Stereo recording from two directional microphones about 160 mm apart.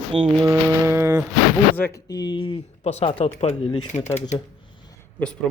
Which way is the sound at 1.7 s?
15° left (ahead or behind).